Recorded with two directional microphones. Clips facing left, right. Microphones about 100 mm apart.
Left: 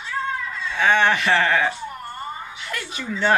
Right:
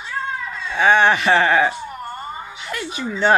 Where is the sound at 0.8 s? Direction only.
20° right (ahead or behind).